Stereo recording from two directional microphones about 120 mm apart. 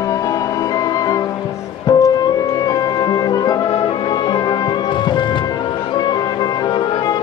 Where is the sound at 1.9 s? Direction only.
30° left (ahead or behind).